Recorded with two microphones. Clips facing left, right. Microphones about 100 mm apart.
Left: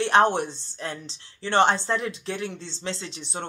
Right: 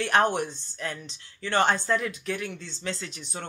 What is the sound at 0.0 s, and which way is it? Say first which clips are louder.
Speech: left 3 dB; 25° left (ahead or behind).